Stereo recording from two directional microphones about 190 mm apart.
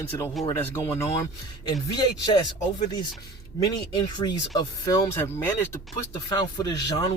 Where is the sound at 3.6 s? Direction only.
20° left (ahead or behind).